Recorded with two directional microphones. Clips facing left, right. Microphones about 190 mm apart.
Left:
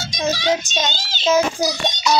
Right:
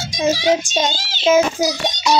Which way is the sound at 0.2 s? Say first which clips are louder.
Right 4 dB; 10° right (ahead or behind).